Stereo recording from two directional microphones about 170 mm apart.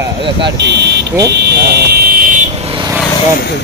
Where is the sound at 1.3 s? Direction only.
75° right (ahead or behind); by 2.4 s 55° right (ahead or behind).